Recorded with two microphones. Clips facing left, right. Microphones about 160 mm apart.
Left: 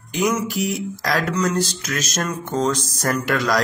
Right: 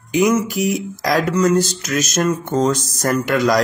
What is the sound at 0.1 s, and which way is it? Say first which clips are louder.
Speech: right 5 dB; 10° right (ahead or behind).